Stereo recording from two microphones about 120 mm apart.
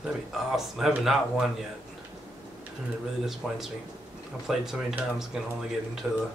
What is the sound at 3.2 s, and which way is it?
Speech, centre (ahead or behind).